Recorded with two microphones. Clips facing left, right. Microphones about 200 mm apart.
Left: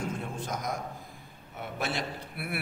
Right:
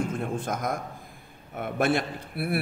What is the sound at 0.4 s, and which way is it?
A man's voice, 55° right (ahead or behind).